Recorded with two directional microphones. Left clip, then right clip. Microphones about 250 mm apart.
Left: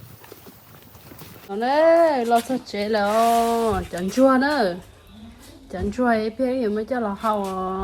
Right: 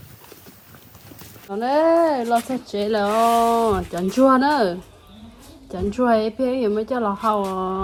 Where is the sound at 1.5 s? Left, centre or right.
Right.